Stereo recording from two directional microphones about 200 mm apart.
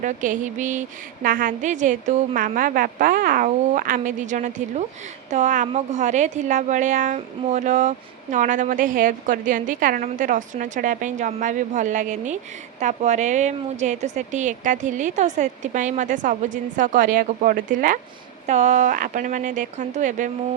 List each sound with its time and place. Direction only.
0.0 s a woman's voice: 40° right (ahead or behind)